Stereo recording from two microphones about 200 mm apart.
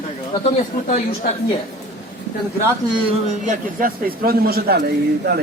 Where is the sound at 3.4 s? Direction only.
40° right (ahead or behind).